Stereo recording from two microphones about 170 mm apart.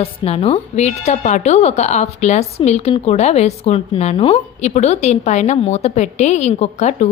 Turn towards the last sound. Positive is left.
turn(degrees=40)  # may be behind; listen again after turning